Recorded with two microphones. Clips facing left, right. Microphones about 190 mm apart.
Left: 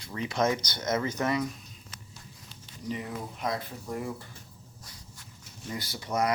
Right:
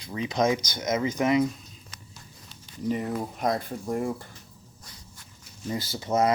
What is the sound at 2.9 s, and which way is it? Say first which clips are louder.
Speech: right 7 dB; 50° right (ahead or behind).